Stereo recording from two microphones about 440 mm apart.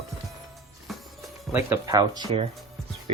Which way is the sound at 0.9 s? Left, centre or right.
Centre.